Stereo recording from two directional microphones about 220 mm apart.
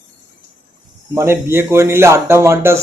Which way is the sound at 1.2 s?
10° right (ahead or behind).